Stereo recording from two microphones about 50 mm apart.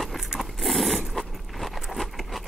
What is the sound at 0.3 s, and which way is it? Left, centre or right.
Zipper, centre.